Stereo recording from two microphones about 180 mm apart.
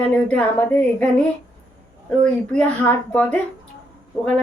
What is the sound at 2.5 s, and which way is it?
Speech, 5° left (ahead or behind).